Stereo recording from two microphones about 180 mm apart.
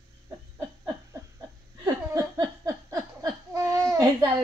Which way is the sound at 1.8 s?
15° right (ahead or behind).